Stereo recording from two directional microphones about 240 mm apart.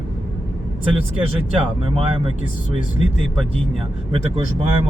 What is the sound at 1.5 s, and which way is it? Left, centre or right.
Speech, right.